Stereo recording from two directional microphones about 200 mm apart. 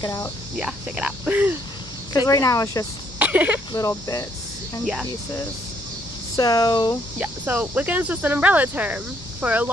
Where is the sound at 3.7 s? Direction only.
20° left (ahead or behind).